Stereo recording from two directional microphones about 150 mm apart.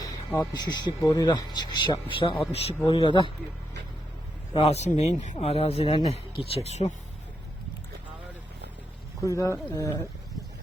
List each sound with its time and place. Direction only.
0.5 s speech: 30° left (ahead or behind)
4.5 s speech: 45° left (ahead or behind)
9.2 s speech: 20° left (ahead or behind)